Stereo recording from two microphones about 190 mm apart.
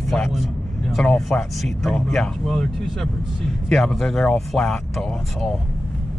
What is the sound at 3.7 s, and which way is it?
Speech, centre (ahead or behind).